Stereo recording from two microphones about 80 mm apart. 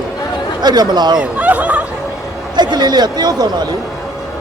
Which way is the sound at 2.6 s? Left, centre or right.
Right.